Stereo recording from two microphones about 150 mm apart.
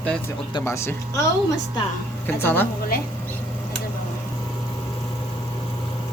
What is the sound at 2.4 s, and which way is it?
Speech, 15° left (ahead or behind).